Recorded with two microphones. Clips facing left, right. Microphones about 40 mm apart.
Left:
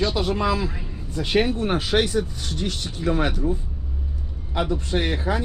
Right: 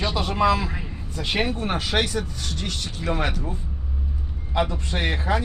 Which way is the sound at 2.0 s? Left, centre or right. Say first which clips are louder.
Left 3 dB; right.